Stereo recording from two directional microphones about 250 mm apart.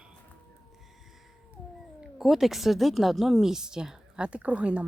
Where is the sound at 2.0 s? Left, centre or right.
Centre.